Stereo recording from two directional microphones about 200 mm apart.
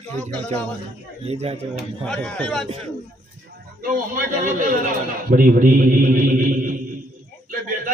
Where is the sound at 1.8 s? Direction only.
5° left (ahead or behind).